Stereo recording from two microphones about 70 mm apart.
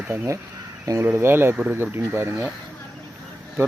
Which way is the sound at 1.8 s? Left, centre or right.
Right.